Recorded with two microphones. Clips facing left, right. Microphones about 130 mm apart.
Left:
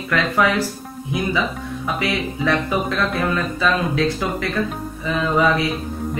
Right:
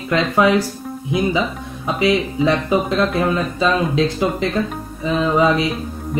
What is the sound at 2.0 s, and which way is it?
Speech, 20° right (ahead or behind).